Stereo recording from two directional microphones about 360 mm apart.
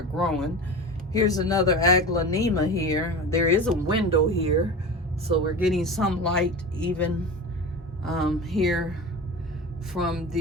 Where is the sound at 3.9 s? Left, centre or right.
Centre.